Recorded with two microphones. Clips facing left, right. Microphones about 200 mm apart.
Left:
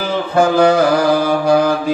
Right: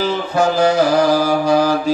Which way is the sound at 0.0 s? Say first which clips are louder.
Left 2 dB; 55° left (ahead or behind).